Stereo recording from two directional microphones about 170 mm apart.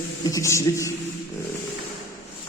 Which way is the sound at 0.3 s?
20° left (ahead or behind).